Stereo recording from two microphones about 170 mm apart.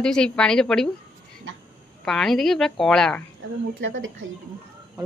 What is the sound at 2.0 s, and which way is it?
A woman's voice, centre (ahead or behind).